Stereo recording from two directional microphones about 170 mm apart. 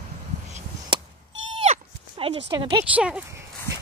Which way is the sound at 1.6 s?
35° right (ahead or behind).